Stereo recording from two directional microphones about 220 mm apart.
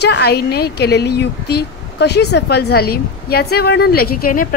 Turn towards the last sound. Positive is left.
turn(degrees=45)  # may be behind; listen again after turning